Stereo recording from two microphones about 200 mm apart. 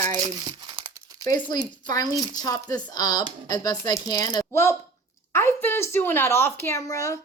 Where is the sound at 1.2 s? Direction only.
20° left (ahead or behind).